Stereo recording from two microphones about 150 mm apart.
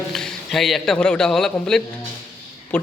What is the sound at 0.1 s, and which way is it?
A man's voice, 5° left (ahead or behind).